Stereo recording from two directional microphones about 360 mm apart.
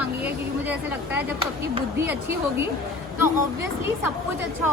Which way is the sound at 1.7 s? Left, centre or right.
Centre.